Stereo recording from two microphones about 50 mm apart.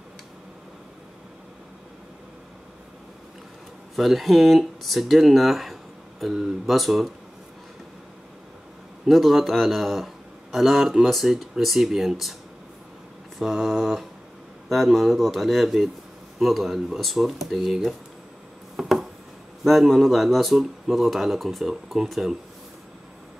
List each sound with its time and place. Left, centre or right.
3.9 s speech: centre
9.0 s a man's voice: centre
13.4 s speech: centre
18.8 s a sound: centre
19.6 s speech: centre